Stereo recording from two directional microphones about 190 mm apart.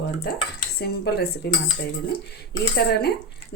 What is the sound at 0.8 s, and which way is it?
Speech, 55° left (ahead or behind).